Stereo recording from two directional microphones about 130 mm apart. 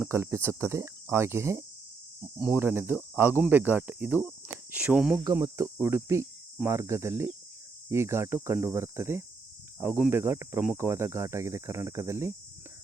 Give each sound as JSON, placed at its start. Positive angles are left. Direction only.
{"t": 0.0, "sound": "speech", "side_deg": -20}
{"t": 5.2, "sound": "speech", "side_deg": -30}